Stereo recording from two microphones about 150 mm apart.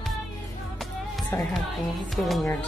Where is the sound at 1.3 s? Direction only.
15° left (ahead or behind).